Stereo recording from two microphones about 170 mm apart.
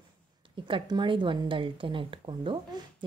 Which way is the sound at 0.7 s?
30° right (ahead or behind).